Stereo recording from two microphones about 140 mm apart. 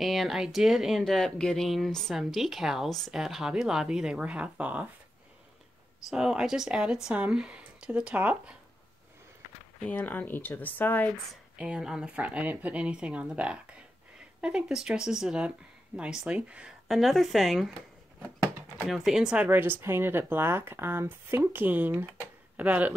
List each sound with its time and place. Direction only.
0.0 s speech: centre (ahead or behind)
6.0 s speech: 5° right (ahead or behind)
9.8 s speech: 10° left (ahead or behind)
11.5 s speech: 5° right (ahead or behind)
18.9 s speech: centre (ahead or behind)